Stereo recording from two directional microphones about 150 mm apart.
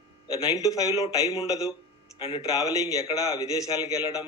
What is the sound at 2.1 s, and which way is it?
Speech, 35° left (ahead or behind).